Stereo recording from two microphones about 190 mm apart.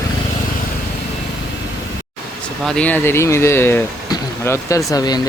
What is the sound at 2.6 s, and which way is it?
Speech, 5° left (ahead or behind).